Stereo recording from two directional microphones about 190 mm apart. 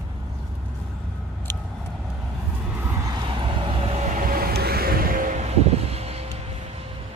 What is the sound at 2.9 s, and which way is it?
Vehicle, 20° right (ahead or behind).